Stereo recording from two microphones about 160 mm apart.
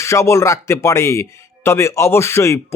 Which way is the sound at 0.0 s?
20° left (ahead or behind).